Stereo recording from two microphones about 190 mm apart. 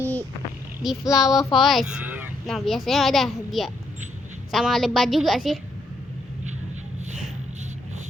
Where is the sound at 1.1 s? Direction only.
20° left (ahead or behind).